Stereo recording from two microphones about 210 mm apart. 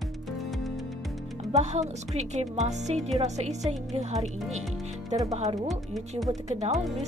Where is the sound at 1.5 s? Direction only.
30° right (ahead or behind).